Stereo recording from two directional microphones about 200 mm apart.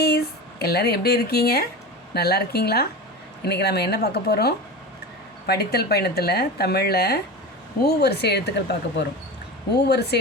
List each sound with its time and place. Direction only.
0.6 s speech: 50° left (ahead or behind)